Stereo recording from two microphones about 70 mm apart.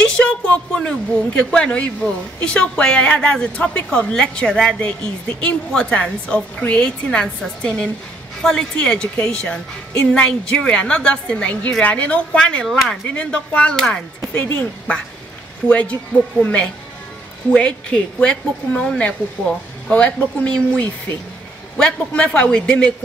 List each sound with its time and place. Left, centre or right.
0.0 s a woman's voice: centre
12.6 s speech: centre
13.1 s a woman's voice: centre
14.4 s a woman's voice: left